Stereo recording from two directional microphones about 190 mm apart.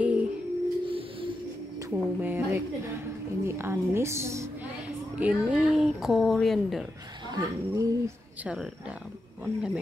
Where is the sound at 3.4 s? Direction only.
15° right (ahead or behind).